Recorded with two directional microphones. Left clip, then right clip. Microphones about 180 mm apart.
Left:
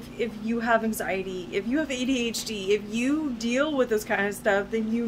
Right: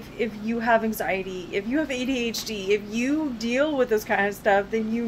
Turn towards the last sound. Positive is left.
turn(degrees=15)  # may be behind; listen again after turning